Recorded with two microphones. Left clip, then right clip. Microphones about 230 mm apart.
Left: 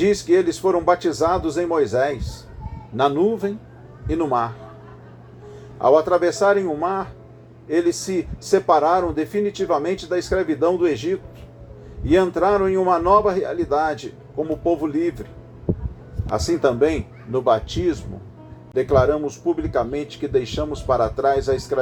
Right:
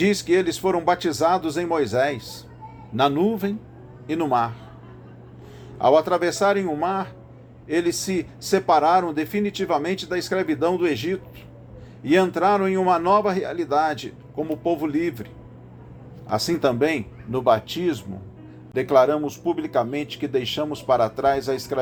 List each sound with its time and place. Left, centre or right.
0.0 s speech: right
5.8 s speech: right
16.3 s speech: right